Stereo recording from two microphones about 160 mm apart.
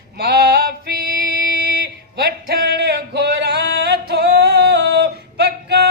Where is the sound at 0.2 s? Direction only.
85° right.